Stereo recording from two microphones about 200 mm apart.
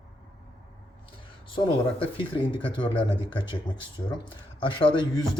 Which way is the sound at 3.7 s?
20° left (ahead or behind).